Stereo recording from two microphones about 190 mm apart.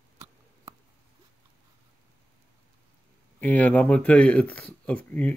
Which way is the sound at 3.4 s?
10° left (ahead or behind).